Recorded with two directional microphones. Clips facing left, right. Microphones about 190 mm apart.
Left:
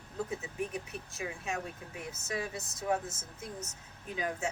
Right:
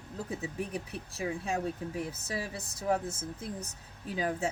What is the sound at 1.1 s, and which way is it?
Speech, 35° right (ahead or behind).